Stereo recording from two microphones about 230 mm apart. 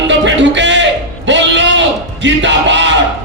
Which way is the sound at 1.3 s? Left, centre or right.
Right.